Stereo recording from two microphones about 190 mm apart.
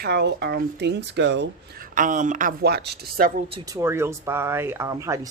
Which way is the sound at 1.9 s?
45° right (ahead or behind).